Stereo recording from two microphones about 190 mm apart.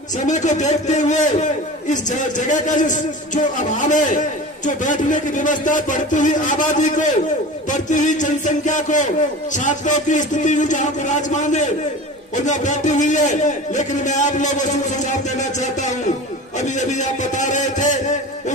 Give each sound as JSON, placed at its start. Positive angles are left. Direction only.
{"t": 0.3, "sound": "a man's voice", "side_deg": 40}